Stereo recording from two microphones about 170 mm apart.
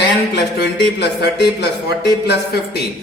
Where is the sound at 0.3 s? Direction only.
80° left.